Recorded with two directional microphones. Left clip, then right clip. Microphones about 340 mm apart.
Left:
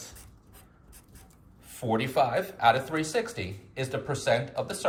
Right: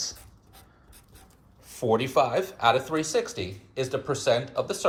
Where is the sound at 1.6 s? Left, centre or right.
Centre.